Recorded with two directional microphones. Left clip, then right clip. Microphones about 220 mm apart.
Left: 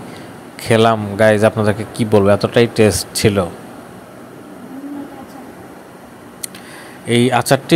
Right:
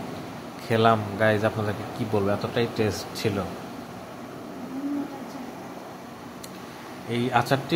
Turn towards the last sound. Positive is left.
turn(degrees=35)  # may be behind; listen again after turning